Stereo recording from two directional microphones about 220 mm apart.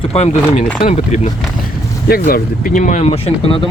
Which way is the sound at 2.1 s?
40° left (ahead or behind).